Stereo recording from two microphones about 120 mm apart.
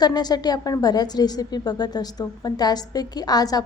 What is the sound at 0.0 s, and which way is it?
A woman's voice, 35° left (ahead or behind).